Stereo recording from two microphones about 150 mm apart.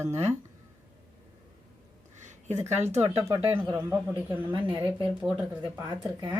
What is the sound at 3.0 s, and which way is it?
A woman's voice, 20° right (ahead or behind).